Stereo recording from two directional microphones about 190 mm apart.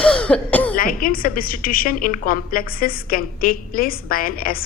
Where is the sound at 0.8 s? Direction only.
50° left (ahead or behind).